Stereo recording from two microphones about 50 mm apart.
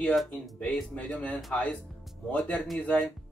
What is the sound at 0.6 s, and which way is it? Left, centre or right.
Speech, left.